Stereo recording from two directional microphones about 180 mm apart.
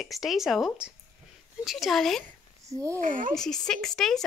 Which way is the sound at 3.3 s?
5° left (ahead or behind).